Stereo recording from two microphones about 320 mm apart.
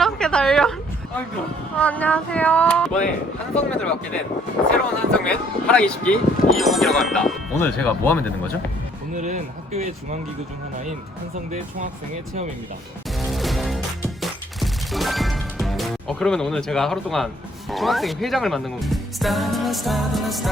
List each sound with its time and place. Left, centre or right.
0.0 s a sound: centre
1.7 s speech: centre
9.1 s speech: right
13.1 s music: centre
17.7 s speech: centre